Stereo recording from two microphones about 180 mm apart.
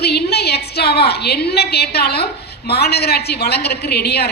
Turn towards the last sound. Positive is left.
turn(degrees=65)  # may be behind; listen again after turning